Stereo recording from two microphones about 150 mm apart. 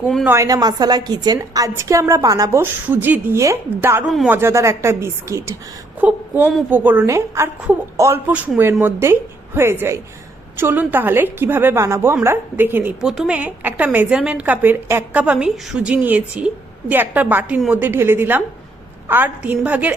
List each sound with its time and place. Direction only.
0.3 s a woman's voice: 20° right (ahead or behind)
4.0 s speech: centre (ahead or behind)
4.3 s a woman's voice: 15° right (ahead or behind)
13.0 s a woman's voice: 5° right (ahead or behind)